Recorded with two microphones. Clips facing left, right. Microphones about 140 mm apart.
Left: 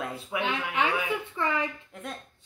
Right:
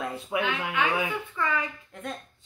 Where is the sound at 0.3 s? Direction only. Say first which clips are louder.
Right 3 dB; 25° right (ahead or behind).